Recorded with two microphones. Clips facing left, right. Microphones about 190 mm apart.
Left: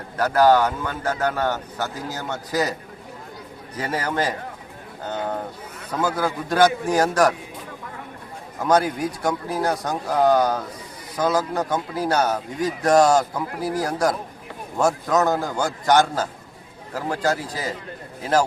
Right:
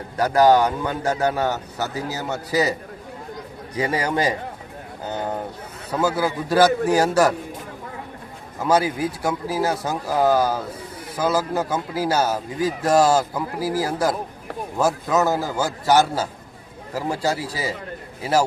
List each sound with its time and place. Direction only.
0.2 s a man's voice: 15° right (ahead or behind)
3.8 s a man's voice: 15° right (ahead or behind)
5.9 s a man's voice: 10° right (ahead or behind)
8.6 s a man's voice: 5° right (ahead or behind)